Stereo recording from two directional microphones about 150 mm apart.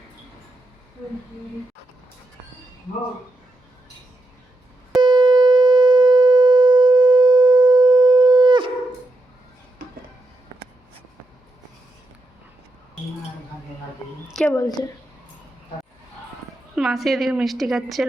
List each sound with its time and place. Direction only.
4.9 s shofar: 30° right (ahead or behind)
14.4 s speech: 20° left (ahead or behind)
16.7 s a woman's voice: centre (ahead or behind)